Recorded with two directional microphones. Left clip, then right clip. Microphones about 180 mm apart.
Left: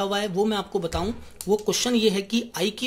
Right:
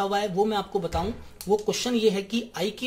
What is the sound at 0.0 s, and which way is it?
Speech, 15° left (ahead or behind).